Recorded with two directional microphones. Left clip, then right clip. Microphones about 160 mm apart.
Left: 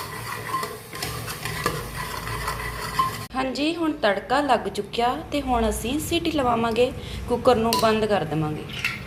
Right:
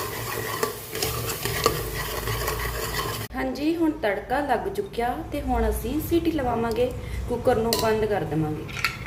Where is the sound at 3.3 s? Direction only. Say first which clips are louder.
Even; 5° left (ahead or behind).